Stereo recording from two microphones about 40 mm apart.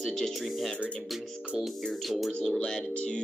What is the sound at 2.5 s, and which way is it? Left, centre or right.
Speech, centre.